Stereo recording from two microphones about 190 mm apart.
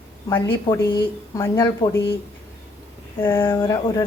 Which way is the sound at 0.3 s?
15° left (ahead or behind).